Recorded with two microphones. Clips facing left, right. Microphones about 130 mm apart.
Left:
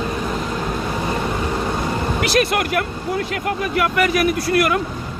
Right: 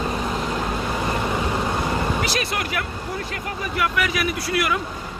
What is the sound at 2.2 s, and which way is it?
Speech, 60° left (ahead or behind).